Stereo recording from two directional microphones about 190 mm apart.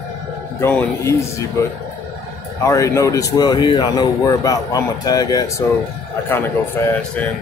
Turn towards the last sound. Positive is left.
turn(degrees=10)  # may be behind; listen again after turning